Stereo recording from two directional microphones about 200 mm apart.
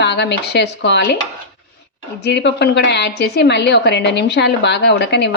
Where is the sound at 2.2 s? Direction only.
60° left (ahead or behind).